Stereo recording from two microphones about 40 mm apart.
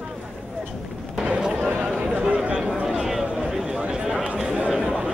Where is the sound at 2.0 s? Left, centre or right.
Right.